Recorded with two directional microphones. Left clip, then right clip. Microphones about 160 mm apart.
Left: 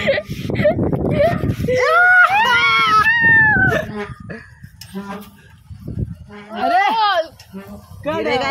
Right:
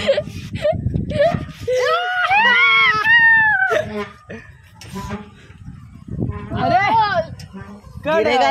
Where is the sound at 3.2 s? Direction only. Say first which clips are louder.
Even; 45° right (ahead or behind).